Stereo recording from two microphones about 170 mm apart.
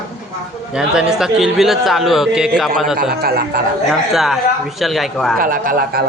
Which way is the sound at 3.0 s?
65° right (ahead or behind).